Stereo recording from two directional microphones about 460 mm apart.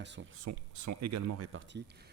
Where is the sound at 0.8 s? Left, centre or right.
Right.